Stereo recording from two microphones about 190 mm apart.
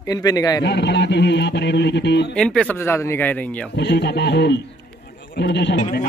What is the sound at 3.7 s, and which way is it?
A man's voice, 65° left (ahead or behind).